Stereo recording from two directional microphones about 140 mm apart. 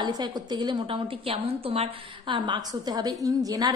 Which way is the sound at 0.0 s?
30° right (ahead or behind).